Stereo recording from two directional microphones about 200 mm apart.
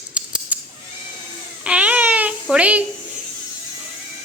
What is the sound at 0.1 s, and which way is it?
Scissors, 5° right (ahead or behind).